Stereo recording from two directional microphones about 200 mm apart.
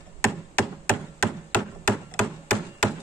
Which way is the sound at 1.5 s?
5° left (ahead or behind).